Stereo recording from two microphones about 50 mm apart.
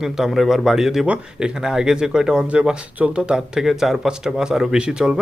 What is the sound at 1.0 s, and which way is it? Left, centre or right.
Speech, right.